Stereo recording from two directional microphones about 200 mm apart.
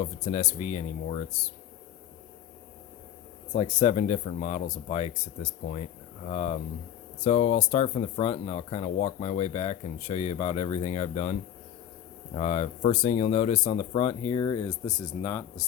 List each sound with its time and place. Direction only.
0.0 s speech: 35° left (ahead or behind)
3.5 s speech: 35° left (ahead or behind); by 15.6 s 20° left (ahead or behind)